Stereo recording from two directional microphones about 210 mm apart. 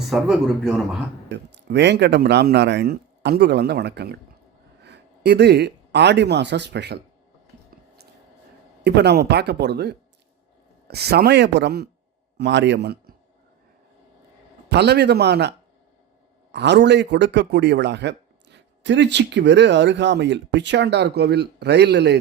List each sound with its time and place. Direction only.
0.1 s speech: 5° right (ahead or behind)
1.5 s speech: 55° right (ahead or behind)
8.8 s a man's voice: 50° right (ahead or behind)
14.7 s speech: 50° right (ahead or behind)